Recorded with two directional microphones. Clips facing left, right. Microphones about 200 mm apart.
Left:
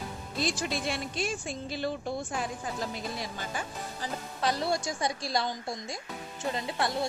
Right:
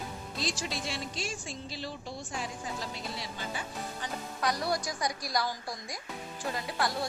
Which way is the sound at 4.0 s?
25° left (ahead or behind).